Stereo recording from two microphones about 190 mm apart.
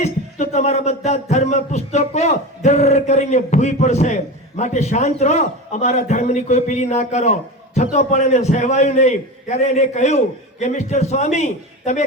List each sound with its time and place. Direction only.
0.0 s a man's voice: 35° left (ahead or behind)